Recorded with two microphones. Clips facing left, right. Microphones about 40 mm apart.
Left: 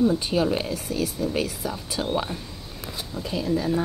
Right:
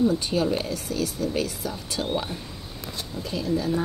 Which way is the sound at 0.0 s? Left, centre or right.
Centre.